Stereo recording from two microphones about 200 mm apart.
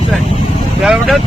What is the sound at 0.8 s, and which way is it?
Speech, centre (ahead or behind).